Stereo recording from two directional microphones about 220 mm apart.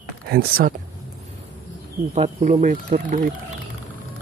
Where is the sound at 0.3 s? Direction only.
40° right (ahead or behind).